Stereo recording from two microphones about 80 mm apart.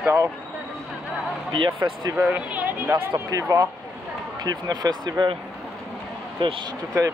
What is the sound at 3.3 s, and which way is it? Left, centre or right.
Speech, right.